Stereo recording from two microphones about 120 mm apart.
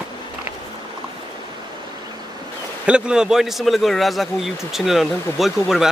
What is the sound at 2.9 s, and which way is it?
A man's voice, 5° right (ahead or behind).